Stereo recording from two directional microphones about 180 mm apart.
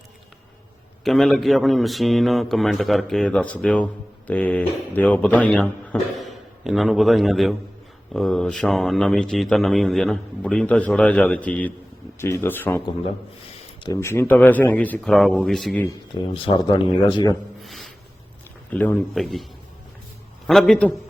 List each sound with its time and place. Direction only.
1.0 s speech: centre (ahead or behind)
13.8 s speech: 15° left (ahead or behind)
16.2 s speech: 25° left (ahead or behind)
17.6 s a sound: centre (ahead or behind)
18.7 s speech: 10° left (ahead or behind)
20.5 s speech: centre (ahead or behind)